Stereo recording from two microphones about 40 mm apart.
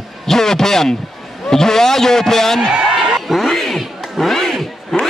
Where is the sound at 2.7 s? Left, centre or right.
Right.